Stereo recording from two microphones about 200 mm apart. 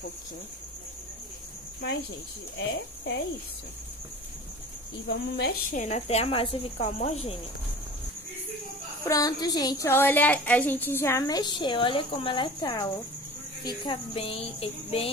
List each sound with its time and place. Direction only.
1.8 s cricket: 55° left (ahead or behind)
2.5 s speech: 60° left (ahead or behind)
5.0 s speech: 60° left (ahead or behind)
5.7 s speech: 35° left (ahead or behind)
9.0 s a woman's voice: 15° left (ahead or behind)